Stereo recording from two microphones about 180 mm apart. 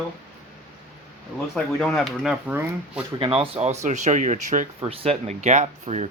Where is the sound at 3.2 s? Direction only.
30° right (ahead or behind).